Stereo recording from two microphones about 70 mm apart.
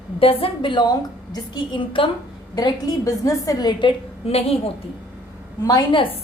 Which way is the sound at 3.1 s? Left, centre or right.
Left.